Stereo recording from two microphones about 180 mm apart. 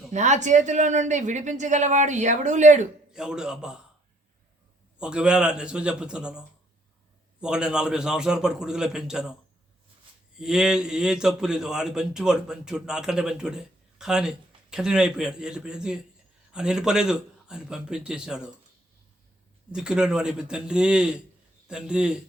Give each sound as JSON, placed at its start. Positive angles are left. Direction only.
{"t": 0.1, "sound": "speech", "side_deg": -40}
{"t": 3.1, "sound": "a man's voice", "side_deg": -5}
{"t": 4.9, "sound": "a man's voice", "side_deg": -5}
{"t": 7.4, "sound": "a man's voice", "side_deg": -5}
{"t": 10.3, "sound": "a man's voice", "side_deg": -5}
{"t": 19.7, "sound": "a man's voice", "side_deg": -5}